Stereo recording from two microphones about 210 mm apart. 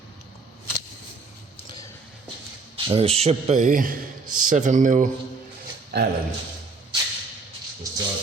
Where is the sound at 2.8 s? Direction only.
25° right (ahead or behind).